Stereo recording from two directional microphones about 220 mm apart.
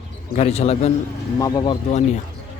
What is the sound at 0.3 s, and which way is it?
Speech, 30° left (ahead or behind).